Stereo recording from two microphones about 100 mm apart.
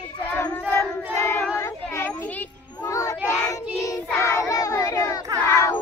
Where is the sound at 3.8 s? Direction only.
30° left (ahead or behind).